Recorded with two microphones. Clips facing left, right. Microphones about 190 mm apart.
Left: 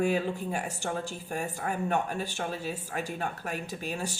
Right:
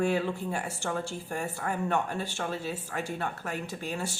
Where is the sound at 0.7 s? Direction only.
40° left (ahead or behind).